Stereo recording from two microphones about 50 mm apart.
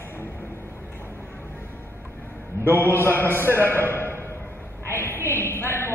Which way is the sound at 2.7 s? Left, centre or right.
Left.